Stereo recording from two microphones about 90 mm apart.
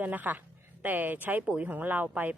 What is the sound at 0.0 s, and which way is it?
A woman's voice, 20° right (ahead or behind).